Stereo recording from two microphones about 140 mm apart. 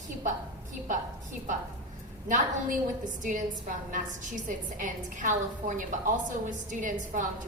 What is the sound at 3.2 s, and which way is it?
A woman's voice, 65° right (ahead or behind).